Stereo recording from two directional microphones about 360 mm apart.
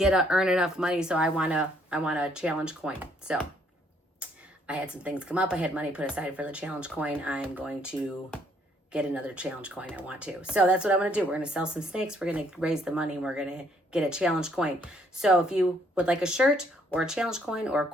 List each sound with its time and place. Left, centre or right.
0.0 s speech: centre